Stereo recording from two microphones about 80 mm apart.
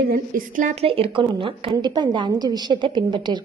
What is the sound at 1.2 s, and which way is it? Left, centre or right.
A woman's voice, right.